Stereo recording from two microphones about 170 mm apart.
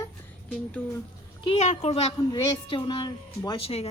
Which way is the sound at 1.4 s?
40° left (ahead or behind).